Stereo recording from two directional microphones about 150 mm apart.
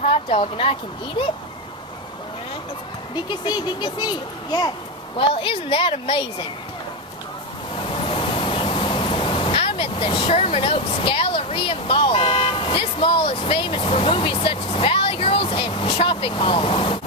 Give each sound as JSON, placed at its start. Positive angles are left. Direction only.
{"t": 0.0, "sound": "speech", "side_deg": 40}
{"t": 3.2, "sound": "speech", "side_deg": 30}
{"t": 5.1, "sound": "a woman's voice", "side_deg": 35}
{"t": 8.0, "sound": "speech", "side_deg": 35}